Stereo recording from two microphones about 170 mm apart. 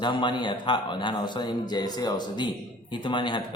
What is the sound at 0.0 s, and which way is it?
A man's voice, 25° left (ahead or behind).